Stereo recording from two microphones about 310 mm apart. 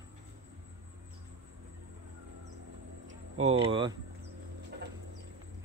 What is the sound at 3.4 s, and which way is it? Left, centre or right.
Speech, centre.